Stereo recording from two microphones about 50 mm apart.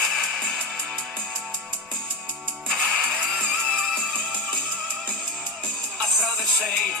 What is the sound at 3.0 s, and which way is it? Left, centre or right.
Music, right.